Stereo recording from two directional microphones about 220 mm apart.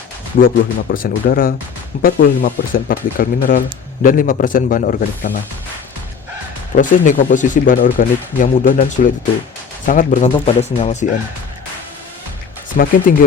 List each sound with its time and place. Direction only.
0.4 s speech: 40° left (ahead or behind)
6.7 s speech: 35° left (ahead or behind)
12.7 s speech: 40° left (ahead or behind)